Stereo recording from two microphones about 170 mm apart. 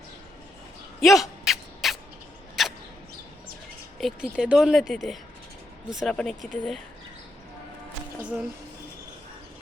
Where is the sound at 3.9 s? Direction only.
Centre (ahead or behind).